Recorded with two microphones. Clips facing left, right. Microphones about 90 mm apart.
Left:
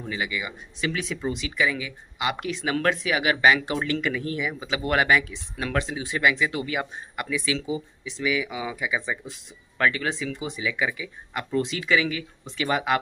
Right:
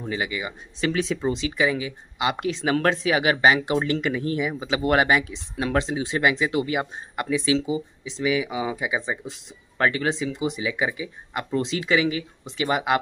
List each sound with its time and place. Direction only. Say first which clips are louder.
0.0 s speech: right 2 dB; 35° right (ahead or behind)